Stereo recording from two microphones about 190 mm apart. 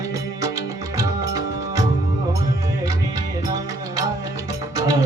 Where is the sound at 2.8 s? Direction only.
20° right (ahead or behind).